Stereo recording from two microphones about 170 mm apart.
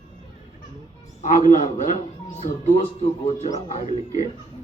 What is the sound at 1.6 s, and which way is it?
Speech, 50° left (ahead or behind).